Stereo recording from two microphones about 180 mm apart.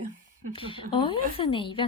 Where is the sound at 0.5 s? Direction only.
30° left (ahead or behind).